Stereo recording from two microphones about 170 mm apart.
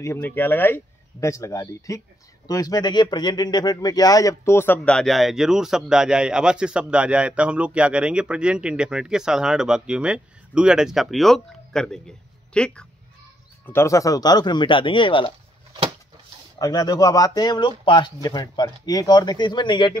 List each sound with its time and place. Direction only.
0.0 s speech: 15° left (ahead or behind)
13.7 s speech: 15° left (ahead or behind)
16.5 s speech: 20° left (ahead or behind)